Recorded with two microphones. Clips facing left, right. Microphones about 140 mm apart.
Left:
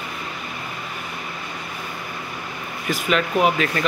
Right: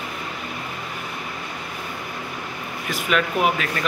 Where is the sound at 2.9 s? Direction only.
Centre (ahead or behind).